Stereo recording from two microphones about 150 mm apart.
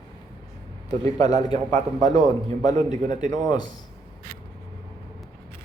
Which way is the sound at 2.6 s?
55° right (ahead or behind).